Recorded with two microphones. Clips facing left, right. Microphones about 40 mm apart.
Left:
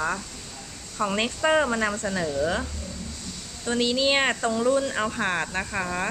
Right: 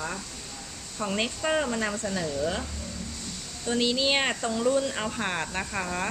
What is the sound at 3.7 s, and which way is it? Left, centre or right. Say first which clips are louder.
Speech: left 2 dB; left.